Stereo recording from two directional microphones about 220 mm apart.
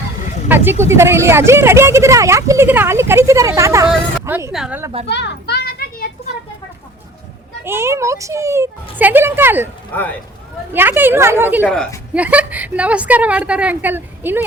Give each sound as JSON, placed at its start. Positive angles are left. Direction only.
{"t": 0.4, "sound": "a woman's voice", "side_deg": -10}
{"t": 5.0, "sound": "children playing", "side_deg": 50}
{"t": 7.6, "sound": "speech", "side_deg": -10}
{"t": 9.9, "sound": "speech", "side_deg": 10}
{"t": 10.7, "sound": "speech", "side_deg": -10}
{"t": 11.6, "sound": "a woman's voice", "side_deg": 5}